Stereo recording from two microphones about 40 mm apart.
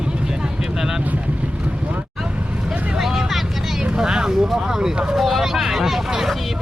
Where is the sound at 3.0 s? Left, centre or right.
Centre.